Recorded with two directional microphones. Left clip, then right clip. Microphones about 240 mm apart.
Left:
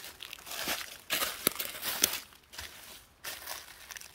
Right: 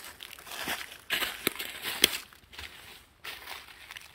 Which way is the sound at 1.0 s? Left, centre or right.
Left.